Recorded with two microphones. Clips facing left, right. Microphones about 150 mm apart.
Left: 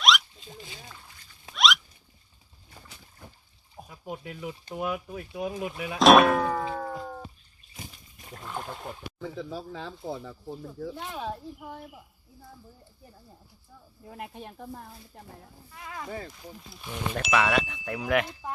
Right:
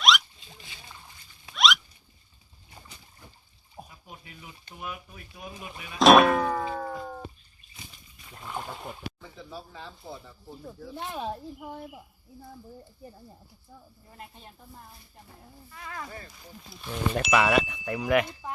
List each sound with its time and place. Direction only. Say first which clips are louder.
0.0 s a sound: even; centre (ahead or behind)
0.3 s a sound: left 6 dB; 45° left (ahead or behind)
1.5 s rodents: even; centre (ahead or behind)
4.0 s speech: left 11 dB; 85° left
6.0 s music: even; centre (ahead or behind)
7.8 s a sound: left 5 dB; 45° left (ahead or behind)
8.4 s speech: even; centre (ahead or behind)
9.2 s speech: left 7 dB; 90° left
10.9 s speech: right 1 dB; 20° right (ahead or behind)
14.1 s speech: left 8 dB; 70° left (ahead or behind)
15.7 s speech: left 3 dB; 10° left (ahead or behind)
17.2 s speech: right 2 dB; centre (ahead or behind)